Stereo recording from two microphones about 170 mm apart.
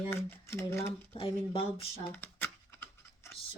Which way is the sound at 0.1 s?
15° left (ahead or behind).